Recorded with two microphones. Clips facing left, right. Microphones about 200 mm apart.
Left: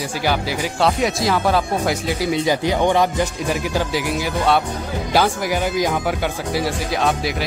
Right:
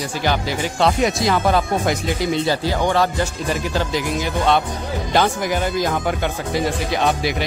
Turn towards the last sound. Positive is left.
turn(degrees=0)  # may be behind; listen again after turning